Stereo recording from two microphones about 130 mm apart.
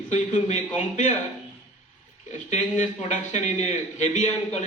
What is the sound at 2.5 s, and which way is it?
A man's voice, 65° left (ahead or behind).